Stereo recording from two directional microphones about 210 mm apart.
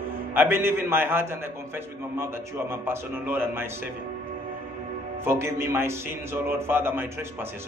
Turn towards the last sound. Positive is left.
turn(degrees=-10)  # may be behind; listen again after turning